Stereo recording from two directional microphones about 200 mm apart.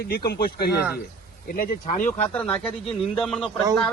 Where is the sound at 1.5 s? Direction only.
40° left (ahead or behind).